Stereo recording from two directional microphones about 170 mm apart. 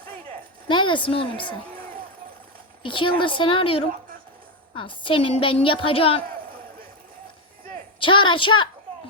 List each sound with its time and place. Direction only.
0.7 s a woman's voice: 30° left (ahead or behind)
1.7 s a sound: 55° right (ahead or behind)
2.8 s a woman's voice: 30° left (ahead or behind)
7.9 s a woman's voice: 30° left (ahead or behind)